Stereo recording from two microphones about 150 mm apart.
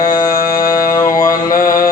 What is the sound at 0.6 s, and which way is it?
Music, 65° left (ahead or behind).